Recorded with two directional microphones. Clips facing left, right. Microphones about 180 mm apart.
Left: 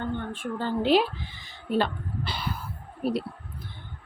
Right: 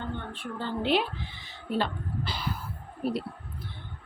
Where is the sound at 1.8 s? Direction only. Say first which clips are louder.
Left 3 dB; 65° left (ahead or behind).